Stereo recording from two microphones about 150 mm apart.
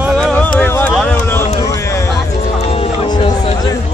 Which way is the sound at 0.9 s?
10° left (ahead or behind).